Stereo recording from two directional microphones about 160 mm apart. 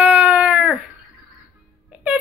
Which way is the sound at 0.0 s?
10° right (ahead or behind).